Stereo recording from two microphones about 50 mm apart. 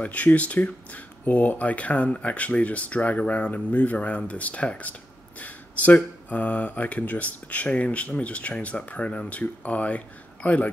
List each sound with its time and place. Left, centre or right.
0.0 s speech: left